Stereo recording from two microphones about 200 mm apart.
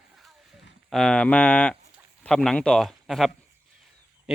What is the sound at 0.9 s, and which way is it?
Speech, centre (ahead or behind).